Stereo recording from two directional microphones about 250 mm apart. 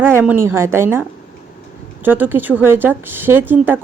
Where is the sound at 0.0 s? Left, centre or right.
Centre.